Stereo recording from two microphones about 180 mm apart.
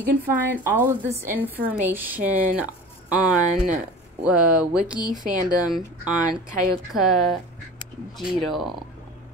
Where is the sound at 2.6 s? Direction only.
5° right (ahead or behind).